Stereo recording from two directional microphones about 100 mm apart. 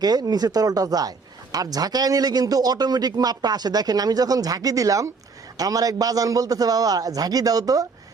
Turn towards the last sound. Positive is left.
turn(degrees=-35)  # may be behind; listen again after turning